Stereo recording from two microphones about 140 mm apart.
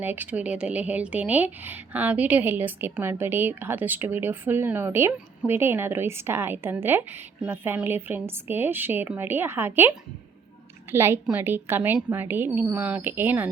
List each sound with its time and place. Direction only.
0.0 s speech: 15° right (ahead or behind)
10.9 s speech: 15° right (ahead or behind)